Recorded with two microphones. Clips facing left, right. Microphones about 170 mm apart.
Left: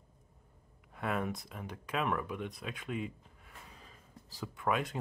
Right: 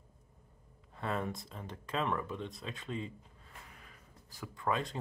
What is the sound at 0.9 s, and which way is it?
Speech, 10° left (ahead or behind).